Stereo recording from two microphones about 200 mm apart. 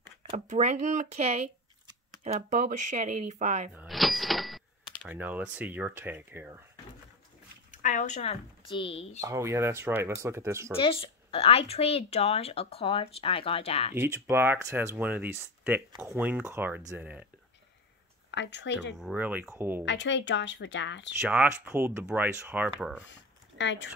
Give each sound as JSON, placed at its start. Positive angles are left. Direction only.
{"t": 0.2, "sound": "speech", "side_deg": -35}
{"t": 3.7, "sound": "speech", "side_deg": 0}
{"t": 7.7, "sound": "speech", "side_deg": 40}
{"t": 9.2, "sound": "speech", "side_deg": -15}
{"t": 10.8, "sound": "speech", "side_deg": 30}
{"t": 13.9, "sound": "speech", "side_deg": -10}
{"t": 18.3, "sound": "speech", "side_deg": 60}
{"t": 18.9, "sound": "speech", "side_deg": -5}
{"t": 19.8, "sound": "speech", "side_deg": 60}
{"t": 21.2, "sound": "speech", "side_deg": -10}
{"t": 23.6, "sound": "speech", "side_deg": 65}